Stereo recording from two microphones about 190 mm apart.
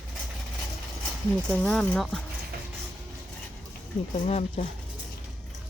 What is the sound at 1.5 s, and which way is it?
Speech, 5° left (ahead or behind).